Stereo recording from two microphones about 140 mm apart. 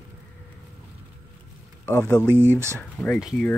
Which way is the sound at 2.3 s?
15° right (ahead or behind).